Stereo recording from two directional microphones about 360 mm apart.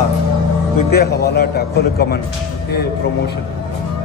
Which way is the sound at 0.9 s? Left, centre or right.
Left.